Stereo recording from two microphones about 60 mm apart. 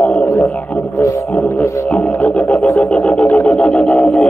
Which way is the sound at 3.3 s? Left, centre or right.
Centre.